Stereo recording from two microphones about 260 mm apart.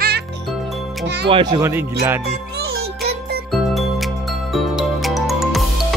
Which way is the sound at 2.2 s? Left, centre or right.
Right.